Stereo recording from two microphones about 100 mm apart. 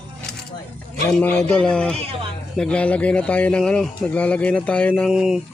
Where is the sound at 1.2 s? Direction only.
15° left (ahead or behind).